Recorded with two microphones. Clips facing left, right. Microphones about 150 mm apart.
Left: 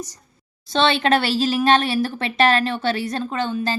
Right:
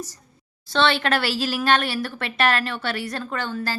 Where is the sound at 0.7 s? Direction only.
20° left (ahead or behind).